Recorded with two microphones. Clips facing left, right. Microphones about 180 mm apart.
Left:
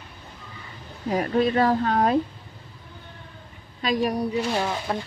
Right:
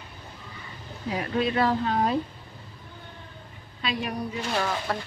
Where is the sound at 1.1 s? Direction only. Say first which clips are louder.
Left 5 dB; 45° left (ahead or behind).